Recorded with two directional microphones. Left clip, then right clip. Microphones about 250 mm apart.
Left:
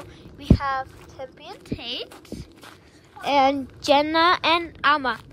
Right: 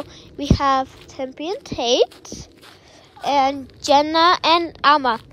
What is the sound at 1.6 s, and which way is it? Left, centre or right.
Speech, centre.